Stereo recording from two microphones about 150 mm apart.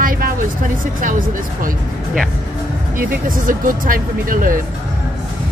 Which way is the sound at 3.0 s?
70° right (ahead or behind).